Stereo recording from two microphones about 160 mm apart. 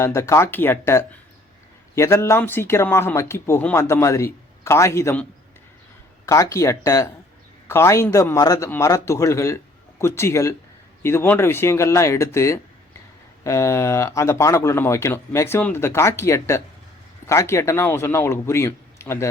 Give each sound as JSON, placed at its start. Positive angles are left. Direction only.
{"t": 0.0, "sound": "speech", "side_deg": 20}
{"t": 6.2, "sound": "speech", "side_deg": 20}